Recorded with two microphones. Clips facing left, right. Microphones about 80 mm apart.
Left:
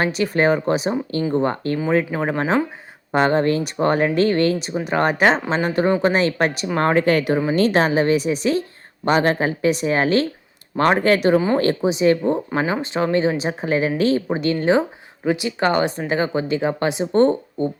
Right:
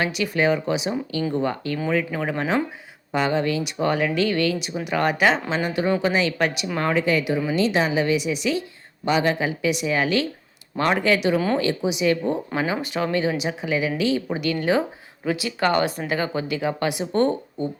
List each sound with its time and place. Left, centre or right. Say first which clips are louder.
0.0 s a woman's voice: left 3 dB; left